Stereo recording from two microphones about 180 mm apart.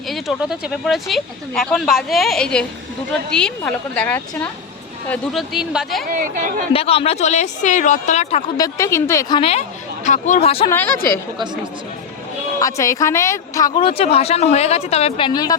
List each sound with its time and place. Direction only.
0.1 s a woman's voice: centre (ahead or behind)
6.1 s speech: 50° right (ahead or behind)
6.7 s speech: 30° left (ahead or behind)
8.5 s a woman's voice: 20° left (ahead or behind)
9.4 s speech: 35° left (ahead or behind)
10.7 s a woman's voice: 10° left (ahead or behind)
12.5 s speech: 20° left (ahead or behind); by 15.3 s 35° left (ahead or behind)
15.3 s speech: 20° left (ahead or behind)